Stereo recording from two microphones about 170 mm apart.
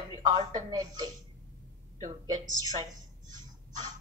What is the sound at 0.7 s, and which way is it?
Speech, 20° right (ahead or behind).